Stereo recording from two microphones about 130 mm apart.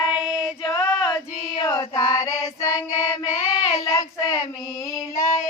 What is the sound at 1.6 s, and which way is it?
Female singing, 20° left (ahead or behind).